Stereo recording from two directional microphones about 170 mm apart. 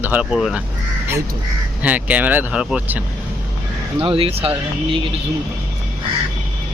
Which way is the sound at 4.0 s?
35° right (ahead or behind).